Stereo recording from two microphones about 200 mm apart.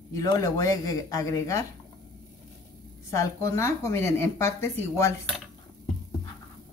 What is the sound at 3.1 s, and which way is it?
Speech, 15° left (ahead or behind).